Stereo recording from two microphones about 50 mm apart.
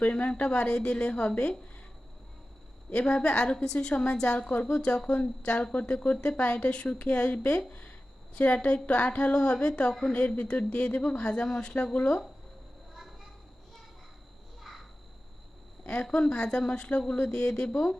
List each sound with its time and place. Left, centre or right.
0.0 s a woman's voice: left
2.9 s a woman's voice: left
14.7 s a sound: centre
15.8 s a woman's voice: centre